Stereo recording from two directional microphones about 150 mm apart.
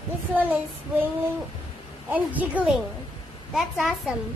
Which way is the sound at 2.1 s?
10° right (ahead or behind).